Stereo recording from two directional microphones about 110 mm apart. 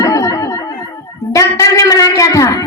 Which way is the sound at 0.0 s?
30° left (ahead or behind).